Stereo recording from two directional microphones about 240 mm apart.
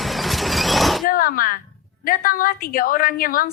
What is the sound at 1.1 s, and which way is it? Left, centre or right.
A woman's voice, left.